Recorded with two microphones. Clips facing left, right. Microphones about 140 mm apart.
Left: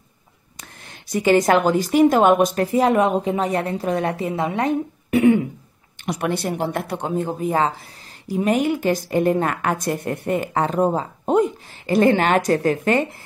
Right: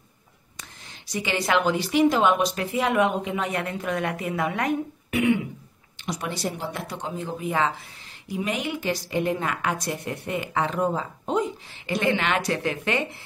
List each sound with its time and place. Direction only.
1.0 s a woman's voice: 50° left (ahead or behind)
6.0 s a woman's voice: 60° left (ahead or behind); by 13.0 s 45° left (ahead or behind)